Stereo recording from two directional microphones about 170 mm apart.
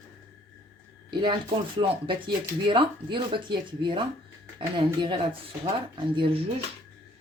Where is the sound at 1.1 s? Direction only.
25° right (ahead or behind).